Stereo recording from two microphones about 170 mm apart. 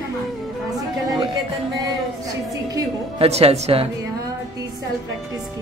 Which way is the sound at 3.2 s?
35° right (ahead or behind).